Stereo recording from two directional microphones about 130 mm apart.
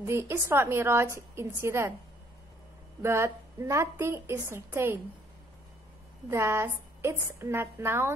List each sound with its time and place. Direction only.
0.0 s a woman's voice: 20° right (ahead or behind)
3.0 s a woman's voice: 20° right (ahead or behind)
6.3 s a woman's voice: 20° right (ahead or behind)